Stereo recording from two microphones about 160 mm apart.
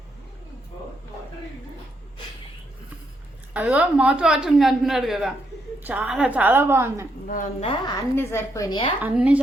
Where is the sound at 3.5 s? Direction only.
10° right (ahead or behind).